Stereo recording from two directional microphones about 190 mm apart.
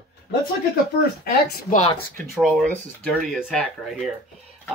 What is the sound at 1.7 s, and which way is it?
Speech, 30° left (ahead or behind).